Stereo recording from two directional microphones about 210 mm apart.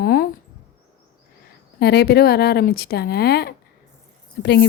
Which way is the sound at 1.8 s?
50° left (ahead or behind).